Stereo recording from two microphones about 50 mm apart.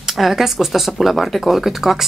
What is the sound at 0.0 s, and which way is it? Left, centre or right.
Speech, centre.